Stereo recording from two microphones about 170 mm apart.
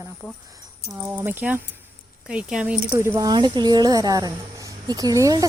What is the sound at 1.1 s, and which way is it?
Speech, 10° right (ahead or behind).